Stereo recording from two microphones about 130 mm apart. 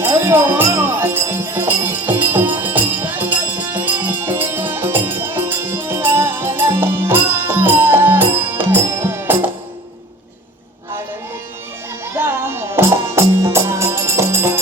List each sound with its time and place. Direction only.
0.0 s music: 15° right (ahead or behind)
12.1 s music: 20° right (ahead or behind)